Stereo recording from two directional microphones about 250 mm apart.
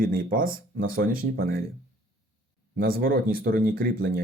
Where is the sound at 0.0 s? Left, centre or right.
Right.